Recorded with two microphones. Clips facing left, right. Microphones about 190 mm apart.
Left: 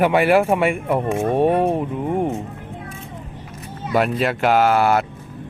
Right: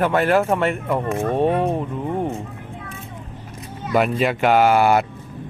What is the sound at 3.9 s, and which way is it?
Speech, centre (ahead or behind).